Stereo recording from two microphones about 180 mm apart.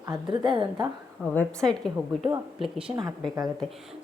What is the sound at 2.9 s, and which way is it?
Speech, 20° right (ahead or behind).